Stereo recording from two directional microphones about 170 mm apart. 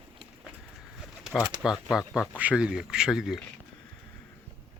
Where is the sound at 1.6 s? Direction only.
Centre (ahead or behind).